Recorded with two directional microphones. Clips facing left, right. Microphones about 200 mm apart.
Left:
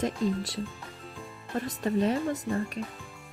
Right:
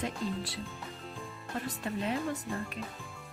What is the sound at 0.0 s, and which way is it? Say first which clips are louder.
Speech: left 6 dB; 40° left (ahead or behind).